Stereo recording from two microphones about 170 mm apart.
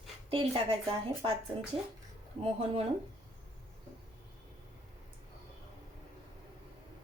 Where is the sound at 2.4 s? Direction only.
35° right (ahead or behind).